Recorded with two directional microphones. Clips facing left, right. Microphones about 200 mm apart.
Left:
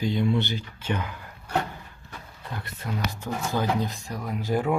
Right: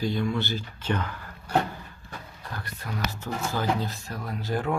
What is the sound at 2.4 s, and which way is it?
Speech, 20° left (ahead or behind).